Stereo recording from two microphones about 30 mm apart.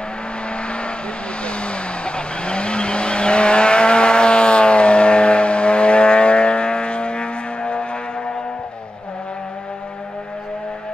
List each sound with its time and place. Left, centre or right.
0.5 s vehicle: left